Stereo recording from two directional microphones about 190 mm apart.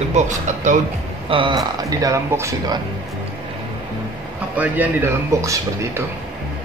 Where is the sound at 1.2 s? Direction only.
25° right (ahead or behind).